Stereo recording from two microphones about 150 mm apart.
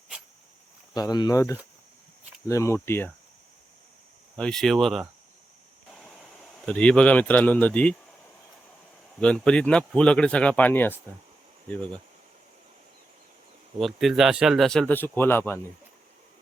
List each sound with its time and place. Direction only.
0.9 s speech: 25° left (ahead or behind)
4.4 s speech: 5° left (ahead or behind)
6.7 s speech: 5° left (ahead or behind)
9.2 s speech: 5° left (ahead or behind)
13.7 s speech: centre (ahead or behind)